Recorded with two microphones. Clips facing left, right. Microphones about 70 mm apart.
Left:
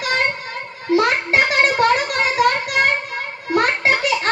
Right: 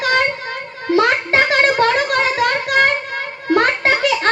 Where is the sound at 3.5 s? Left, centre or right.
Right.